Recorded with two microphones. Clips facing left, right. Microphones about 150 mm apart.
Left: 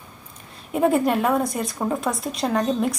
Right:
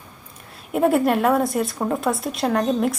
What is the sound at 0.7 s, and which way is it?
Speech, 5° right (ahead or behind).